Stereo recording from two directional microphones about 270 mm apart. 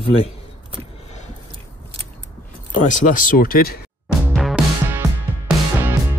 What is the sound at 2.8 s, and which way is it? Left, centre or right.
Speech, left.